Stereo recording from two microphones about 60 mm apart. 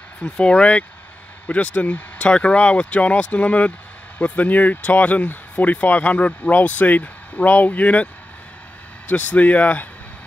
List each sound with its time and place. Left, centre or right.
0.2 s speech: centre